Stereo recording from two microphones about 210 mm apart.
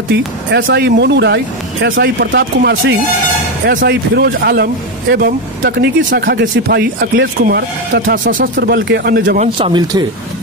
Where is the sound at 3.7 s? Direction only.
45° right (ahead or behind).